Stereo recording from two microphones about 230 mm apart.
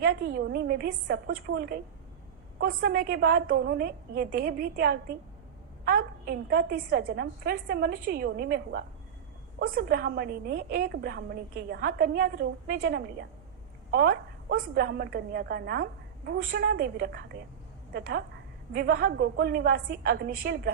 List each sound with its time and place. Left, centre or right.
0.0 s a woman's voice: right